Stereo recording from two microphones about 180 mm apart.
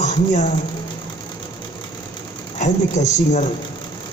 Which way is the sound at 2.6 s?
40° left (ahead or behind).